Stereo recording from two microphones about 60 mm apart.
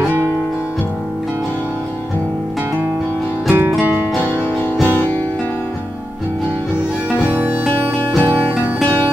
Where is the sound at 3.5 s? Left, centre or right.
Right.